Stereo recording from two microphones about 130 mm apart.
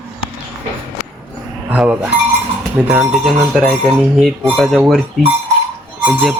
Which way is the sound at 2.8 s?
10° right (ahead or behind).